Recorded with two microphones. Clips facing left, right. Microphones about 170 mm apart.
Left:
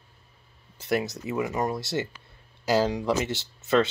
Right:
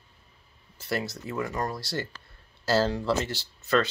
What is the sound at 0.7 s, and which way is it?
Speech, 20° left (ahead or behind).